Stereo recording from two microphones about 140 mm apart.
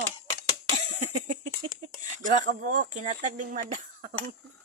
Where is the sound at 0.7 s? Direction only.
60° right (ahead or behind).